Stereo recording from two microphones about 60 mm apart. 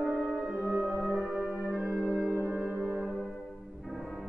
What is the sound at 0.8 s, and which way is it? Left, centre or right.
Music, centre.